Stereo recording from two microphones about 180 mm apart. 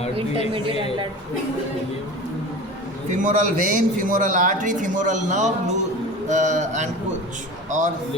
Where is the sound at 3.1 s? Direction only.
45° right (ahead or behind).